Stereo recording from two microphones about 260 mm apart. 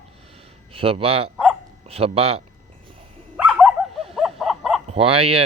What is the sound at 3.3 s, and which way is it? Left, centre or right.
Dog, centre.